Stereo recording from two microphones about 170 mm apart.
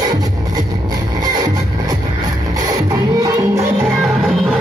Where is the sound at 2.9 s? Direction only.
20° right (ahead or behind).